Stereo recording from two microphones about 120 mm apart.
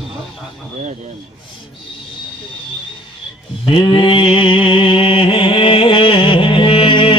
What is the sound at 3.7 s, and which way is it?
Mantra, 45° left (ahead or behind).